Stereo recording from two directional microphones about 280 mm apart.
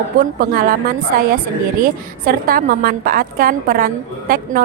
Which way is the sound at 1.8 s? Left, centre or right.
Right.